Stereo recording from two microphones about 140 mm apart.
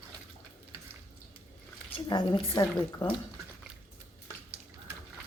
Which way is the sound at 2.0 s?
30° left (ahead or behind).